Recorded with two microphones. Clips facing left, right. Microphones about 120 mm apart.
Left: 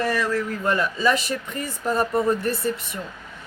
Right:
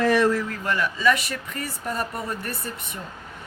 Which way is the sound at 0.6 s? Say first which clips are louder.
Left 1 dB; 30° left (ahead or behind).